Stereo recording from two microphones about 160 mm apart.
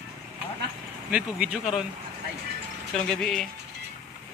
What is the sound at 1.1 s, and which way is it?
Speech, 5° right (ahead or behind).